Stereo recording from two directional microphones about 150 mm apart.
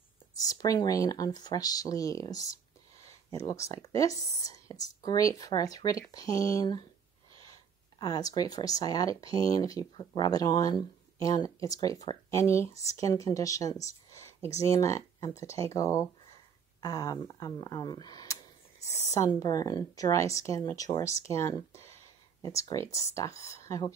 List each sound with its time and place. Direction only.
0.4 s speech: 25° left (ahead or behind)
3.0 s a sound: 20° left (ahead or behind)
3.8 s speech: 20° left (ahead or behind)
8.0 s speech: 25° left (ahead or behind)